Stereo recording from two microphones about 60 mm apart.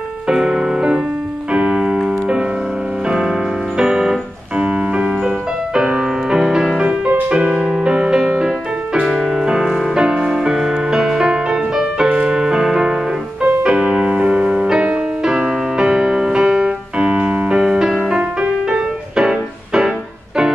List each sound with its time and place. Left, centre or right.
0.3 s music: centre
1.5 s piano: centre
3.1 s music: centre
7.1 s music: right
7.5 s music: centre